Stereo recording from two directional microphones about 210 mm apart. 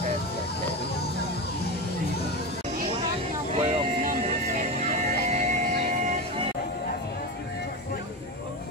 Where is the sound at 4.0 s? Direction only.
40° right (ahead or behind).